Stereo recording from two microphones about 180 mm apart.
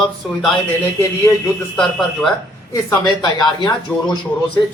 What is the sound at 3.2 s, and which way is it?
Speech, 25° left (ahead or behind).